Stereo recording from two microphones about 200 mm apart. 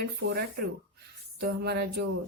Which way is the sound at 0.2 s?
65° right (ahead or behind).